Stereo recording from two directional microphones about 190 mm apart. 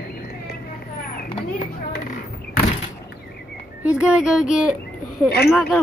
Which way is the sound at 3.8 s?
5° right (ahead or behind).